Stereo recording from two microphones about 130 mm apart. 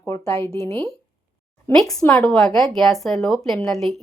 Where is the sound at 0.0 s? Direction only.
25° left (ahead or behind).